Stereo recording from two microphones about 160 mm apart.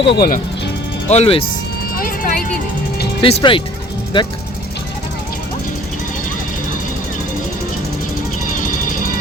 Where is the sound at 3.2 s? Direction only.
35° left (ahead or behind).